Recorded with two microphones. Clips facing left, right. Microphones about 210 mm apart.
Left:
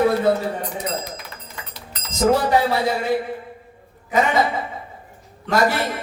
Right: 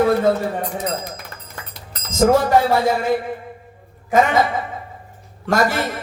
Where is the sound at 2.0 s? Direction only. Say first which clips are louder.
Right 3 dB; 45° right (ahead or behind).